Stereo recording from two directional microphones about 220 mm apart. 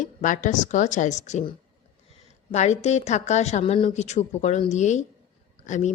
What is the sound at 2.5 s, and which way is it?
A woman's voice, 30° left (ahead or behind).